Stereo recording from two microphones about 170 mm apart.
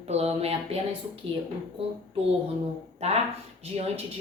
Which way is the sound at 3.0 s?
40° right (ahead or behind).